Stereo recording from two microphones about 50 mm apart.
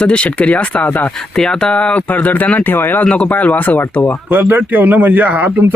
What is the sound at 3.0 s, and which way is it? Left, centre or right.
Speech, left.